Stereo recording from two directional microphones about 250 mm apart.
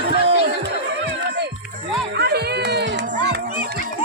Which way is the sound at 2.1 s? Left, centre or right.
Right.